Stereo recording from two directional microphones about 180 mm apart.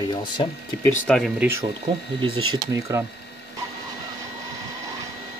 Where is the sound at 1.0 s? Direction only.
5° left (ahead or behind).